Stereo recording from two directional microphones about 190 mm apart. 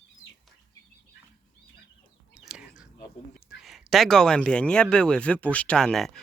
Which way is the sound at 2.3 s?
5° right (ahead or behind).